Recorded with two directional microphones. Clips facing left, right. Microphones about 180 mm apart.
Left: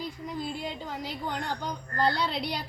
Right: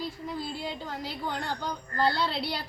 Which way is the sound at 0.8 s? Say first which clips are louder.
Even; 10° left (ahead or behind).